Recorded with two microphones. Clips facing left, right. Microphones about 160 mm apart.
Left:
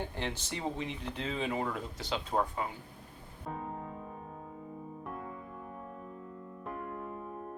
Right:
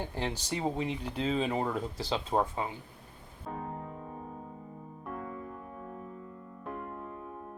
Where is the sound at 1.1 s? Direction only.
30° right (ahead or behind).